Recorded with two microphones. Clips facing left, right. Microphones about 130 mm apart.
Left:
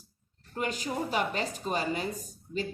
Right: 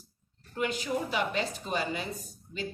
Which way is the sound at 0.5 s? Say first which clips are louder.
Right 1 dB; 40° left (ahead or behind).